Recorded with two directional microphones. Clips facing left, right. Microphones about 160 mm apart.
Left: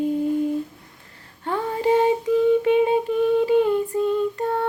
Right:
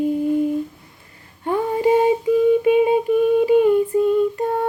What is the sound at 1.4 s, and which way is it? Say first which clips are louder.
Humming: right 4 dB; 15° right (ahead or behind).